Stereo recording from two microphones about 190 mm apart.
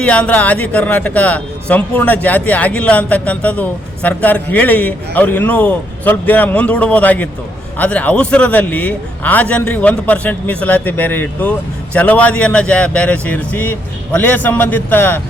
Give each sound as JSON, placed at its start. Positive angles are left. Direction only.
{"t": 0.0, "sound": "speech", "side_deg": 5}